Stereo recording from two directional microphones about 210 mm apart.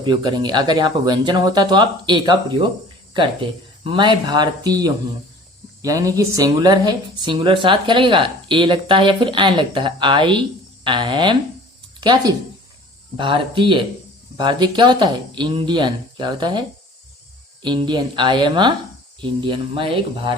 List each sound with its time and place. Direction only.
0.0 s speech: 20° right (ahead or behind)
3.8 s speech: 20° right (ahead or behind)